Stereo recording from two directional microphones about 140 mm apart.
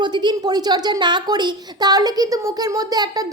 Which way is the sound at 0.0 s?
30° right (ahead or behind).